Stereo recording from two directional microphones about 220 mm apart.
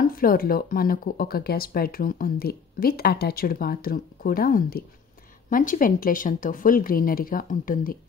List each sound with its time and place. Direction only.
0.0 s speech: 40° left (ahead or behind)